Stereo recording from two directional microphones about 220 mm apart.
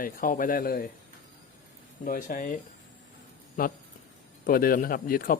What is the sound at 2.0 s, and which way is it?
Speech, 40° left (ahead or behind).